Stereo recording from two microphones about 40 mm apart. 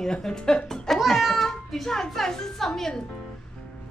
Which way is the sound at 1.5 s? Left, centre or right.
Centre.